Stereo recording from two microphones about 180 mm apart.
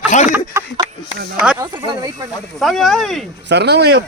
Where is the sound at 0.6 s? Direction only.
15° right (ahead or behind).